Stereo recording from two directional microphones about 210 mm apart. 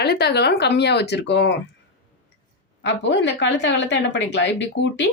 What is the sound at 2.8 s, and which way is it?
Speech, 60° left (ahead or behind).